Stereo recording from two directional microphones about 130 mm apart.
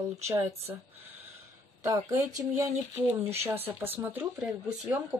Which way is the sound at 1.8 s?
25° right (ahead or behind).